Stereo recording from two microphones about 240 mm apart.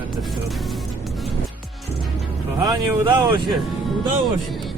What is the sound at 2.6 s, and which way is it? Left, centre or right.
Speech, centre.